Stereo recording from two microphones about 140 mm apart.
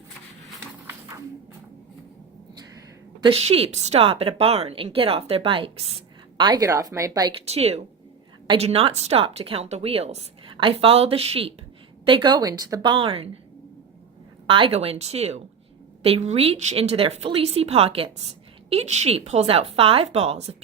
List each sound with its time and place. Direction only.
3.2 s a woman's voice: 40° right (ahead or behind)
6.3 s speech: 30° right (ahead or behind)
7.3 s a woman's voice: 45° right (ahead or behind)
14.4 s a woman's voice: 40° right (ahead or behind)